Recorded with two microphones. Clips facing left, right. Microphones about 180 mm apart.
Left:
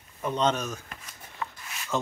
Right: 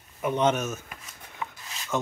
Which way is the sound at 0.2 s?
10° right (ahead or behind).